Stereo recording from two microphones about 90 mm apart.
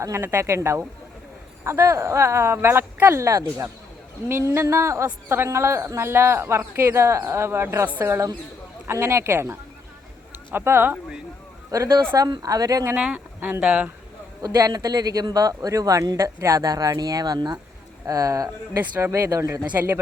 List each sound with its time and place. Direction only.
0.0 s speech: 30° right (ahead or behind)
11.7 s speech: 40° right (ahead or behind)
13.1 s speech: 20° right (ahead or behind)
14.4 s speech: 45° right (ahead or behind)
18.0 s speech: 40° right (ahead or behind)